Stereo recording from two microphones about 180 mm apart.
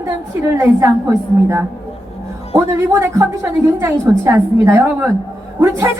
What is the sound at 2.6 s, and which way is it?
A woman's voice, 15° right (ahead or behind).